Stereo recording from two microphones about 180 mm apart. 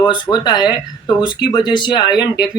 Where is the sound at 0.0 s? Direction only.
25° left (ahead or behind).